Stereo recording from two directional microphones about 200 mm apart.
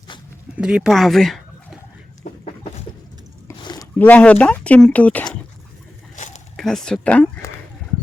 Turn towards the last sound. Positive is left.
turn(degrees=5)  # may be behind; listen again after turning